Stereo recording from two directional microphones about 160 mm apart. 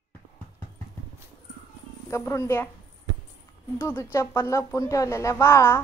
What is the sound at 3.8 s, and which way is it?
Speech, 15° left (ahead or behind).